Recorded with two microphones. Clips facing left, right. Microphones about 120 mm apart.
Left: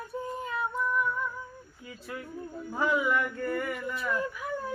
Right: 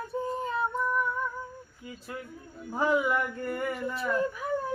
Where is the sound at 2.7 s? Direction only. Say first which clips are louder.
Right 1 dB; 25° right (ahead or behind).